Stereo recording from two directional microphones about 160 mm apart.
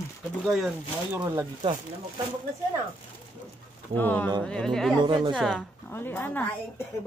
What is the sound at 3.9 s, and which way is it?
A woman's voice, 10° left (ahead or behind).